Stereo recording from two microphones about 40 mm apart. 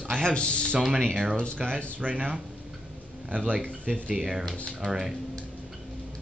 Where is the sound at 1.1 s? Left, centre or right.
Centre.